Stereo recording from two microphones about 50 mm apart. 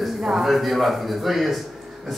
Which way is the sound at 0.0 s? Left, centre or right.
Centre.